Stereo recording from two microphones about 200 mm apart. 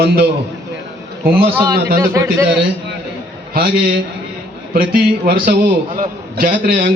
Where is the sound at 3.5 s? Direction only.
45° right (ahead or behind).